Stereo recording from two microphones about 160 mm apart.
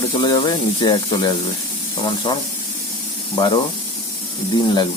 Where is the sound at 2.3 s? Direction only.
30° left (ahead or behind).